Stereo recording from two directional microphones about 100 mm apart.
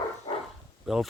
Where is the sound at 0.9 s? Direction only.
5° right (ahead or behind).